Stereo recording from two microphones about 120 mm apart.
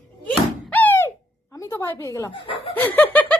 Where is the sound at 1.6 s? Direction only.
20° left (ahead or behind).